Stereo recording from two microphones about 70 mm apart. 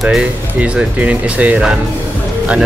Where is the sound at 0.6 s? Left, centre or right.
Centre.